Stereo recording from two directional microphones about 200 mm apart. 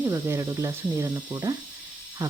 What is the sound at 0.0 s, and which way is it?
Speech, 15° right (ahead or behind).